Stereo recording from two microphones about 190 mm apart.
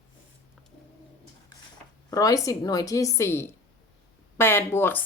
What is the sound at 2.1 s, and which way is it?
Speech, 20° left (ahead or behind).